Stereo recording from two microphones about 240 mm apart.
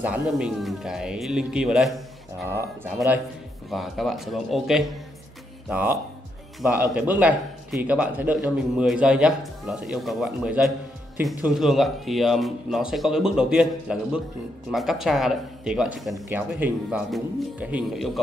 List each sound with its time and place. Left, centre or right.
0.4 s speech: centre